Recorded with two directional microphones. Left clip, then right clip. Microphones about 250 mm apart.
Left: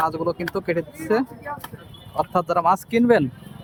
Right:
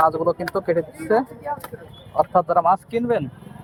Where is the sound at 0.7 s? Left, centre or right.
Left.